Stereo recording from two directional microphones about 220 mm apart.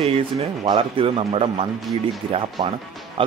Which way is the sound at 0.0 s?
25° right (ahead or behind).